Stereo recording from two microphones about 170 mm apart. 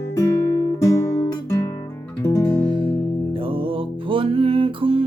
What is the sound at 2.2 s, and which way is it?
Music, 20° left (ahead or behind).